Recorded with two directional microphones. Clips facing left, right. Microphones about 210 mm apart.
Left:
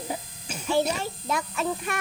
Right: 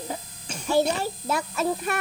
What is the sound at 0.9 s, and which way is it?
A child's voice, 40° right (ahead or behind).